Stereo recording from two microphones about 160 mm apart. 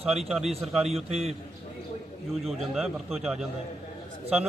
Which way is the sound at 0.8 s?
40° right (ahead or behind).